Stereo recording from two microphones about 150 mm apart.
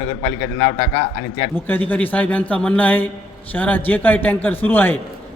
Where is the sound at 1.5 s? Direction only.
15° left (ahead or behind).